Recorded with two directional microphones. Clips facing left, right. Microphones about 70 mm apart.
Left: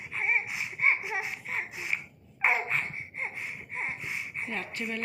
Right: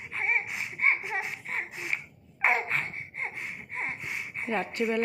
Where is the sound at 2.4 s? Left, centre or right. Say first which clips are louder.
Right 1 dB; right.